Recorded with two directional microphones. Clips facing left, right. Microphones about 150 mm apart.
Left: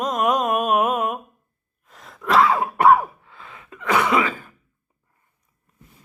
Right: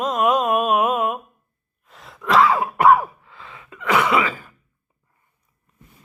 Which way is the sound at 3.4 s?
35° left (ahead or behind).